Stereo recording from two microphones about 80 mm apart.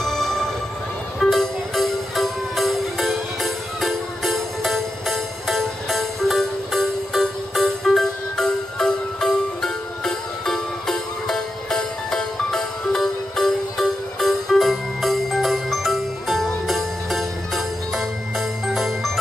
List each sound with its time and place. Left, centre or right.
0.0 s music: centre